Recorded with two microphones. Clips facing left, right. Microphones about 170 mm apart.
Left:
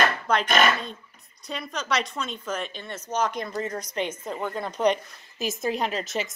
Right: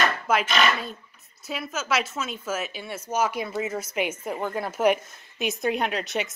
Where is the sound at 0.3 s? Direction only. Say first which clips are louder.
Right 2 dB; 5° right (ahead or behind).